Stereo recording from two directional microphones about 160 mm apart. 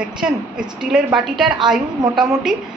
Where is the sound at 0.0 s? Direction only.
5° right (ahead or behind).